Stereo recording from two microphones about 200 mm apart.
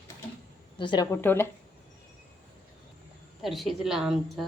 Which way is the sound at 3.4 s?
Centre (ahead or behind).